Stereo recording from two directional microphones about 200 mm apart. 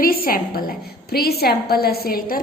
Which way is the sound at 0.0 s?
45° left (ahead or behind).